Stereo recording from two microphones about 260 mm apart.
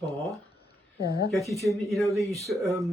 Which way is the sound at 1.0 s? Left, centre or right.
Left.